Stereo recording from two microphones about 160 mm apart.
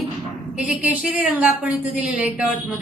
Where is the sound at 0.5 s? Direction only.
10° right (ahead or behind).